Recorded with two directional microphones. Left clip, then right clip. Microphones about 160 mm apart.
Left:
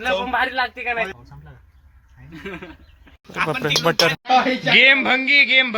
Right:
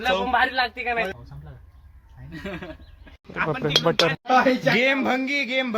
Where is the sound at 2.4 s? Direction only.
90° right.